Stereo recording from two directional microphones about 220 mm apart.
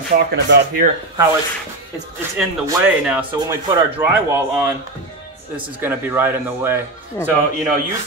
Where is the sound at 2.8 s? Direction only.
5° right (ahead or behind).